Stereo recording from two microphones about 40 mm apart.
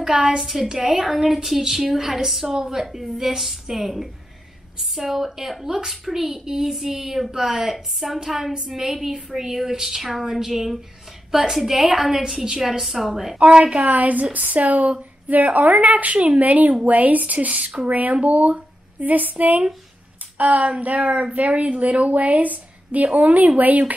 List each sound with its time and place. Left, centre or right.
0.0 s a woman's voice: centre
11.8 s a woman's voice: centre
13.4 s a woman's voice: right
13.9 s speech: right